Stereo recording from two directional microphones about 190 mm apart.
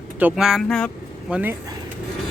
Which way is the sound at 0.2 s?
5° right (ahead or behind).